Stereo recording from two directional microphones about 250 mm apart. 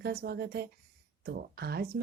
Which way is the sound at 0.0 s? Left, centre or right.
Right.